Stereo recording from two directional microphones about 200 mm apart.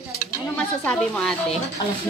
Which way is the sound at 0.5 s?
5° left (ahead or behind).